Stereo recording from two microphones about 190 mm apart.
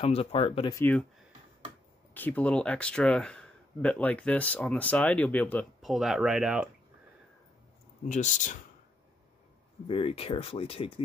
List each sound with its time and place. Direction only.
0.0 s speech: 30° left (ahead or behind)
0.7 s speech: 10° left (ahead or behind)
2.1 s speech: 10° left (ahead or behind)
8.0 s speech: 40° left (ahead or behind)
9.8 s speech: 30° left (ahead or behind)